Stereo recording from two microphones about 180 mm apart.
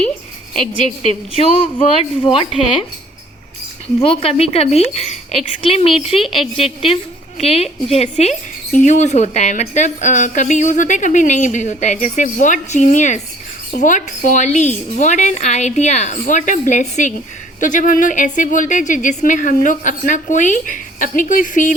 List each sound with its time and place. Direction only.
1.0 s speech: 30° left (ahead or behind)
4.0 s speech: 30° left (ahead or behind)
6.2 s a woman's voice: centre (ahead or behind)
6.8 s speech: 30° left (ahead or behind)